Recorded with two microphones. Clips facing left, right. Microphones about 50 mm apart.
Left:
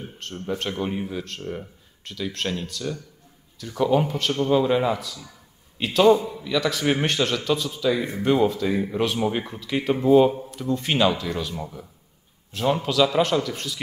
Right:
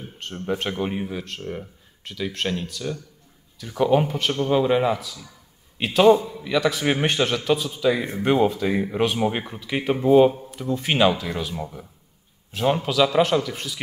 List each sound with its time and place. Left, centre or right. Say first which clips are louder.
0.2 s a man's voice: right 2 dB; centre
1.0 s a man's voice: even; centre